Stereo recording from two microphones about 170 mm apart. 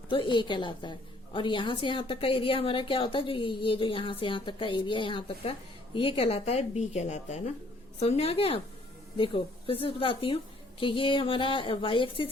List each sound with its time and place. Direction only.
0.1 s a woman's voice: 30° left (ahead or behind)